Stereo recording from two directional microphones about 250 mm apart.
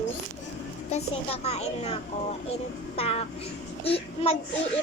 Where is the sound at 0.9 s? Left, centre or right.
Left.